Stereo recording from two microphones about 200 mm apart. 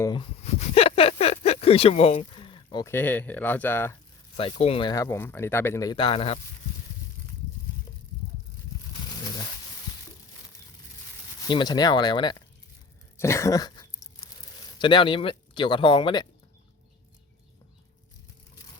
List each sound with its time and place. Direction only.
0.0 s speech: 25° left (ahead or behind)
2.8 s speech: 10° left (ahead or behind)
4.4 s speech: 30° left (ahead or behind)
11.4 s speech: 20° left (ahead or behind)
13.1 s a sound: 15° left (ahead or behind)
14.8 s speech: 25° left (ahead or behind)